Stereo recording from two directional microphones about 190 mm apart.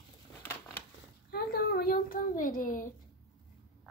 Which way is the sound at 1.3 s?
55° left (ahead or behind).